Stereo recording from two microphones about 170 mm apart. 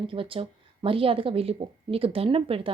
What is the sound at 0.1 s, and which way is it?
Speech, 30° right (ahead or behind).